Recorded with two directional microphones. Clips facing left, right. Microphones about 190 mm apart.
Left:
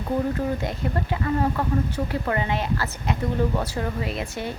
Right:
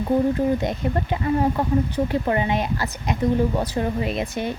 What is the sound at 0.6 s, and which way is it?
Speech, 20° right (ahead or behind).